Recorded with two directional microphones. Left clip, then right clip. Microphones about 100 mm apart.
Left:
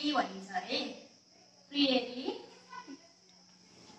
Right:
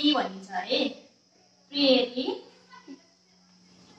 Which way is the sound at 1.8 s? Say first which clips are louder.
Right 9 dB; 30° right (ahead or behind).